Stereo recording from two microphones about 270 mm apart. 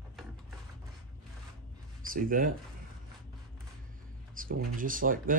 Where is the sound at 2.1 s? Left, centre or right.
Right.